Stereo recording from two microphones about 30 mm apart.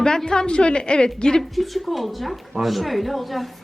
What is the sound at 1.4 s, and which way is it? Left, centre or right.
Speech, centre.